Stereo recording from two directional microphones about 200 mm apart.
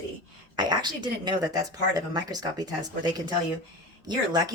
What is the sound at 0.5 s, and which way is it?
Speech, 20° right (ahead or behind).